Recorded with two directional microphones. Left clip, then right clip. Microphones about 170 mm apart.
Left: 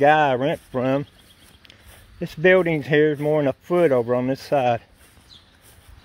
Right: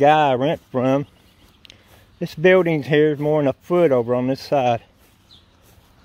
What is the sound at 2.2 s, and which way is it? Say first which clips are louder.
Speech: right 2 dB; 20° right (ahead or behind).